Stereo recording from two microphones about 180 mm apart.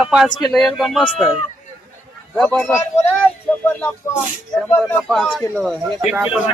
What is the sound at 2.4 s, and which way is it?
Speech, 5° left (ahead or behind).